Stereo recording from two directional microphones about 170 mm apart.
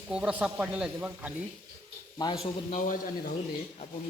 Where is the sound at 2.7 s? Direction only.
50° left (ahead or behind).